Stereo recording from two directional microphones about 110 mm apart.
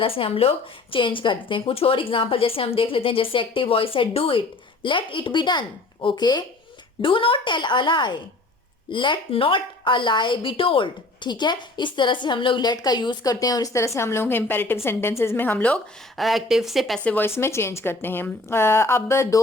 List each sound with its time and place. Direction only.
0.0 s a woman's voice: 55° left (ahead or behind); by 6.4 s 40° left (ahead or behind)
7.0 s a woman's voice: 55° left (ahead or behind); by 15.8 s 15° left (ahead or behind)
16.1 s speech: centre (ahead or behind)
17.0 s a woman's voice: 15° left (ahead or behind)